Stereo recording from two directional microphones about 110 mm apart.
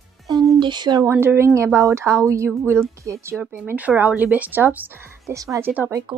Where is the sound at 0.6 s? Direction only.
45° right (ahead or behind).